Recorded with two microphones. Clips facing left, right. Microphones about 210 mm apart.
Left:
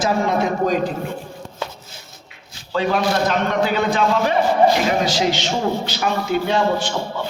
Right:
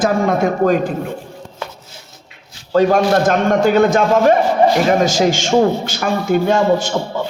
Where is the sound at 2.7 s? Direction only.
45° right (ahead or behind).